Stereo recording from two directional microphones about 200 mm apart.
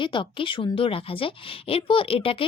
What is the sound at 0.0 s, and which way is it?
Speech, 25° left (ahead or behind).